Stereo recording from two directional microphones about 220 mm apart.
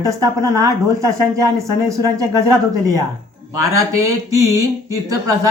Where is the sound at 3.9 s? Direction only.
15° right (ahead or behind).